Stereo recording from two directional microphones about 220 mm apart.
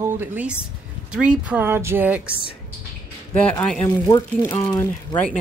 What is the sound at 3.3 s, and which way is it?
Speech, 5° left (ahead or behind).